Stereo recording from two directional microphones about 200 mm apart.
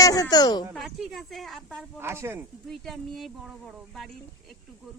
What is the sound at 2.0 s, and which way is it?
Speech, 10° right (ahead or behind).